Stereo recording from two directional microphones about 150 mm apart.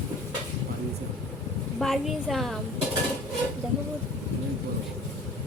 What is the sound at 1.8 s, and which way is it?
Speech, centre (ahead or behind).